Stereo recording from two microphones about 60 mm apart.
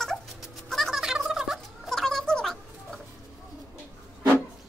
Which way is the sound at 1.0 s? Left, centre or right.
Centre.